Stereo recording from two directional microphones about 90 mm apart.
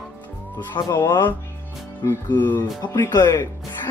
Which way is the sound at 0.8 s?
45° left (ahead or behind).